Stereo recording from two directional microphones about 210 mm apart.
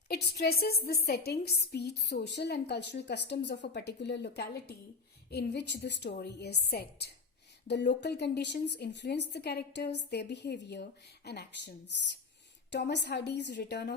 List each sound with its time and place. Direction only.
0.1 s a woman's voice: 50° left (ahead or behind)